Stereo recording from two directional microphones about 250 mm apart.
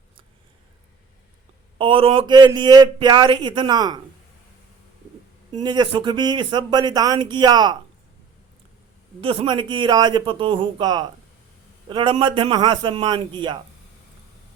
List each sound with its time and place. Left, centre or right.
1.8 s speech: right
5.6 s speech: centre
9.2 s a man's voice: right